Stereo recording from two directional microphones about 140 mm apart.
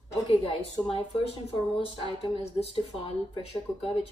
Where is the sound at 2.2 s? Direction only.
45° left (ahead or behind).